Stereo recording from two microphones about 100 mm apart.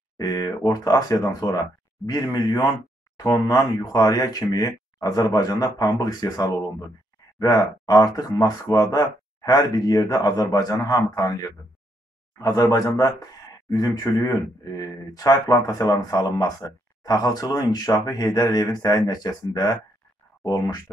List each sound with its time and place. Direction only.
0.2 s speech: 35° left (ahead or behind)